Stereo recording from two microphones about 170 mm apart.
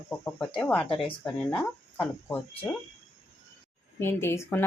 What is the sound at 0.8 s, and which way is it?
Speech, 30° left (ahead or behind).